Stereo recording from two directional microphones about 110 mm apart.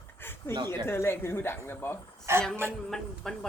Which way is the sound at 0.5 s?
40° right (ahead or behind).